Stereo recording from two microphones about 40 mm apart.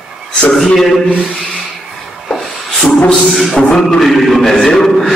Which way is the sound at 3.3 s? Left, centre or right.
Centre.